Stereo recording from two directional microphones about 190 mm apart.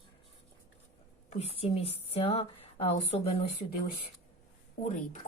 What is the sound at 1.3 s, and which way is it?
Speech, 35° left (ahead or behind).